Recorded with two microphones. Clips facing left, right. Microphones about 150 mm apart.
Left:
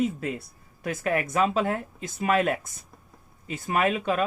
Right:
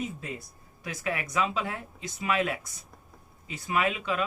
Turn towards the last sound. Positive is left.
turn(degrees=45)  # may be behind; listen again after turning